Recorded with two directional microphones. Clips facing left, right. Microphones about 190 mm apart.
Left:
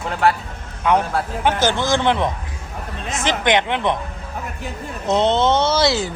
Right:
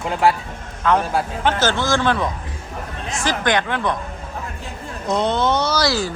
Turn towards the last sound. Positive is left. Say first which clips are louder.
# left 2 dB
turn(degrees=20)  # may be behind; listen again after turning